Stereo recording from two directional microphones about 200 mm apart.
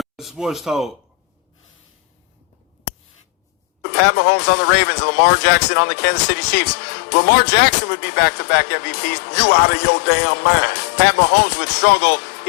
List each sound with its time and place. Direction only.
0.0 s speech: centre (ahead or behind)
3.8 s speech: 55° left (ahead or behind)